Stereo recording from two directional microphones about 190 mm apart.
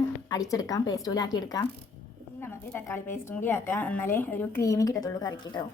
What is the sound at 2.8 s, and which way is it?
A woman's voice, 10° left (ahead or behind).